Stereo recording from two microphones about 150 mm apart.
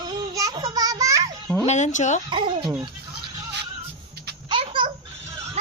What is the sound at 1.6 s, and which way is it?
Speech, 50° left (ahead or behind).